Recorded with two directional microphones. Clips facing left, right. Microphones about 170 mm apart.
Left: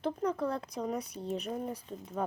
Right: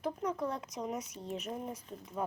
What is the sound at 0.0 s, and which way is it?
Speech, 30° left (ahead or behind).